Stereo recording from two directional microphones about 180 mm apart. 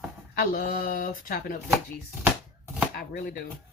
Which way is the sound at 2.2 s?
10° right (ahead or behind).